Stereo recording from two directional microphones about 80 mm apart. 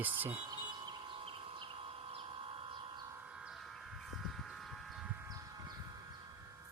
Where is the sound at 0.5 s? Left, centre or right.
Right.